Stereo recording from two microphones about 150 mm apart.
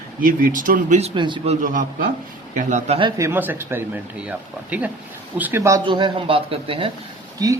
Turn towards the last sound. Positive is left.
turn(degrees=-25)  # may be behind; listen again after turning